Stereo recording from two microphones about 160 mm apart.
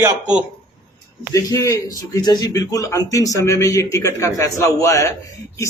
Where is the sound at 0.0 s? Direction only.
5° right (ahead or behind).